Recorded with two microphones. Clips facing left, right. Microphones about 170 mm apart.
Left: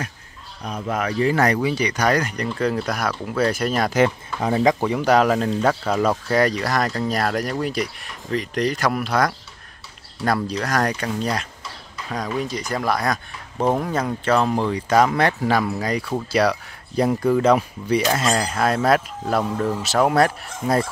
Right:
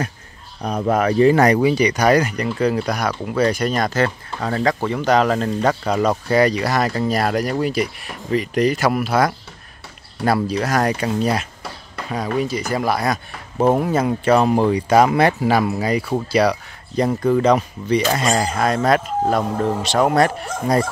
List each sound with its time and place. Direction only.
0.8 s speech: 35° right (ahead or behind)
1.3 s speech: 15° right (ahead or behind); by 20.4 s centre (ahead or behind)